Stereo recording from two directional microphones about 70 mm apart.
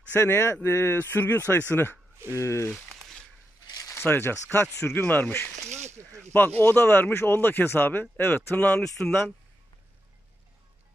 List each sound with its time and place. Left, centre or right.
0.2 s speech: left
2.7 s a sound: centre
3.8 s speech: left
5.9 s speech: right
6.3 s speech: left
8.8 s speech: centre